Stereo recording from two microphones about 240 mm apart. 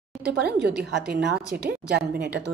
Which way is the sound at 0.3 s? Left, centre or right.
Right.